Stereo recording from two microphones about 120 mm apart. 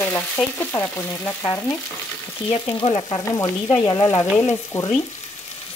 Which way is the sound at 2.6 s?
40° left (ahead or behind).